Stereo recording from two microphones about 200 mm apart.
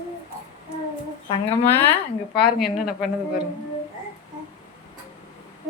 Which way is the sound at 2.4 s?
50° left (ahead or behind).